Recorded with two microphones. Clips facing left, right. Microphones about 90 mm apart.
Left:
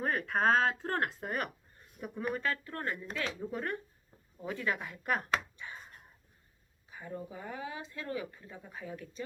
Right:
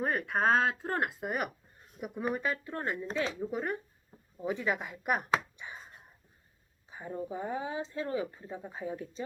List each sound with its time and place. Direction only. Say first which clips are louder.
0.0 s speech: right 1 dB; 5° right (ahead or behind)
3.1 s speech: right 4 dB; 30° right (ahead or behind)
3.4 s speech: right 3 dB; 10° right (ahead or behind)
4.4 s a sound: right 3 dB; 15° right (ahead or behind)
6.9 s speech: right 5 dB; 25° right (ahead or behind)